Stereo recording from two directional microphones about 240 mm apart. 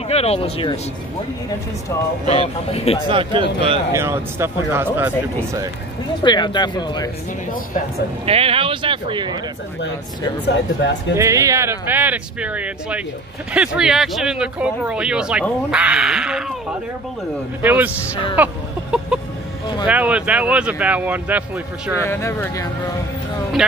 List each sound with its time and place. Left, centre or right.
0.1 s speech: left
2.2 s speech: left
3.1 s speech: centre
6.2 s speech: centre
8.3 s speech: right
10.4 s speech: left
11.1 s speech: centre
17.6 s speech: centre
22.0 s speech: centre